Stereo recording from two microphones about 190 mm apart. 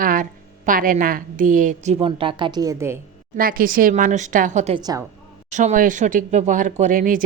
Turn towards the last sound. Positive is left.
turn(degrees=-45)  # may be behind; listen again after turning